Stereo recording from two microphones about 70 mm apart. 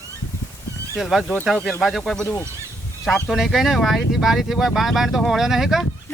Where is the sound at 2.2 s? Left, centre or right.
Left.